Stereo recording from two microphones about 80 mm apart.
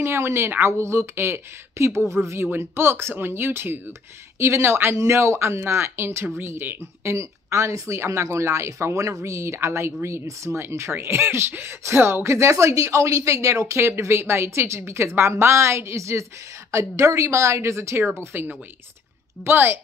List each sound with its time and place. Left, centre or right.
0.0 s speech: right
18.3 s speech: right